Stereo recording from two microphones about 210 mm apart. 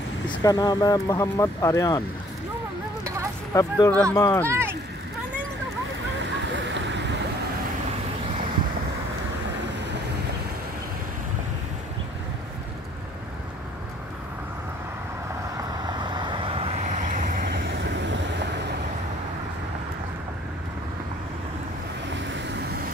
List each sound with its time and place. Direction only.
0.3 s speech: 15° left (ahead or behind)
3.5 s speech: 15° left (ahead or behind)
4.5 s a sound: 10° right (ahead or behind)
6.4 s a sound: 60° right (ahead or behind)
15.5 s vehicle: 20° right (ahead or behind); by 18.5 s 55° right (ahead or behind)
22.1 s vehicle: 55° right (ahead or behind)